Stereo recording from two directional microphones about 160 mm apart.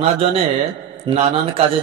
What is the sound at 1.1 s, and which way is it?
Speech, 30° right (ahead or behind).